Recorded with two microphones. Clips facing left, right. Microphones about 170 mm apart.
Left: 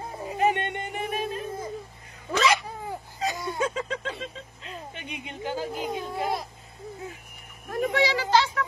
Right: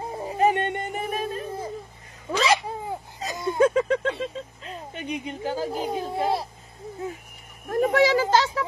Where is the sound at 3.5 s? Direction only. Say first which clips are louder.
Right 9 dB; 55° right (ahead or behind).